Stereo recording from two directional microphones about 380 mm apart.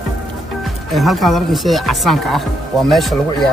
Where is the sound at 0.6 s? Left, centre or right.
Centre.